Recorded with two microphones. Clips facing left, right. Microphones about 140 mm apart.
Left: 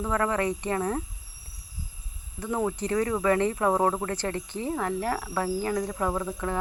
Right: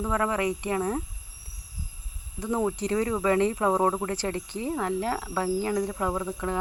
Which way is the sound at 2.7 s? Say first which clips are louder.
Even; 15° right (ahead or behind).